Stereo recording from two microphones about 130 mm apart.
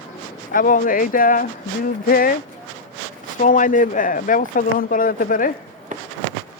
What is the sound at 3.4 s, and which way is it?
Speech, 90° left.